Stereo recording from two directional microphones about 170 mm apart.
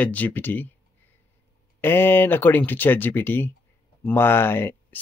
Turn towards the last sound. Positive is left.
turn(degrees=15)  # may be behind; listen again after turning